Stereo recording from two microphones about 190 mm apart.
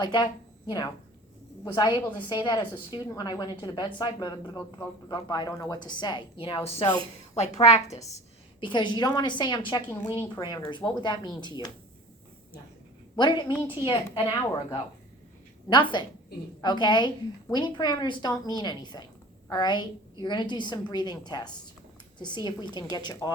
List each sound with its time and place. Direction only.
0.0 s a woman's voice: 25° left (ahead or behind)
1.6 s a woman's voice: 20° left (ahead or behind)
8.6 s a woman's voice: 25° left (ahead or behind)
13.1 s a woman's voice: 25° left (ahead or behind)
13.5 s a woman's voice: 10° right (ahead or behind)
13.8 s a woman's voice: 20° left (ahead or behind)